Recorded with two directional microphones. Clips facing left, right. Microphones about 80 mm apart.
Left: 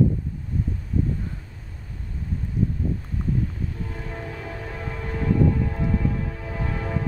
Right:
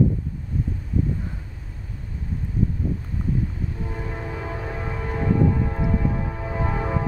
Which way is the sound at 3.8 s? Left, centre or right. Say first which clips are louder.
Right 2 dB; centre.